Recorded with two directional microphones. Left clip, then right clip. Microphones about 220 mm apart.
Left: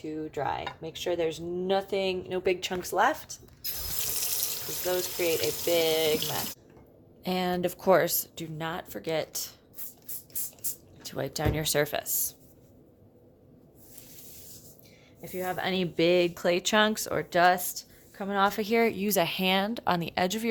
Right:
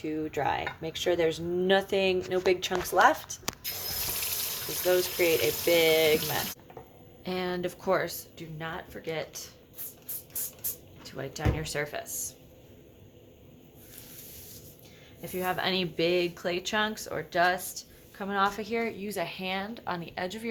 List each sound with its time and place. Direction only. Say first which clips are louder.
0.0 s speech: right 2 dB; 5° right (ahead or behind)
4.9 s speech: right 3 dB; centre (ahead or behind)
7.3 s speech: left 3 dB; 25° left (ahead or behind); by 9.5 s 45° left (ahead or behind)
11.0 s speech: left 3 dB; 40° left (ahead or behind)
15.2 s speech: right 1 dB; 5° left (ahead or behind); by 20.5 s 45° left (ahead or behind)